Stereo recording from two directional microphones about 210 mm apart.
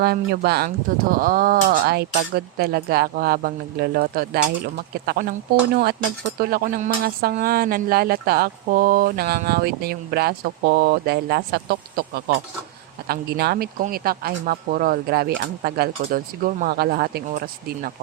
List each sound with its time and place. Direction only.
0.0 s speech: 50° right (ahead or behind)